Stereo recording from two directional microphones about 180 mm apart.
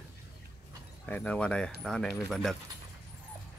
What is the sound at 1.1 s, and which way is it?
Speech, 5° left (ahead or behind).